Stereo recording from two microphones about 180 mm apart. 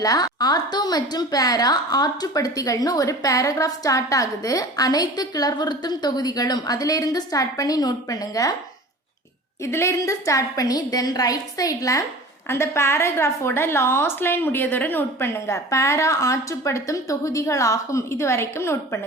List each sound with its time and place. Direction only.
0.0 s a woman's voice: 20° left (ahead or behind)
9.6 s a woman's voice: 15° left (ahead or behind)